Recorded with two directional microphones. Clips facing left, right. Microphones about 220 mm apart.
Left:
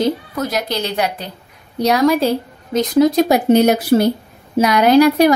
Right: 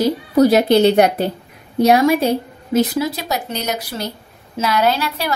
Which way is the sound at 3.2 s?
50° left (ahead or behind).